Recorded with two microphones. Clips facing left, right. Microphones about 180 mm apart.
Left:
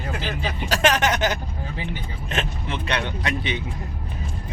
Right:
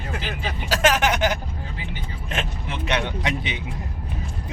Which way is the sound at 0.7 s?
5° right (ahead or behind).